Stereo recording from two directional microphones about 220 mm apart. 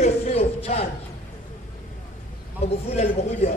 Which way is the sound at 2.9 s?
30° left (ahead or behind).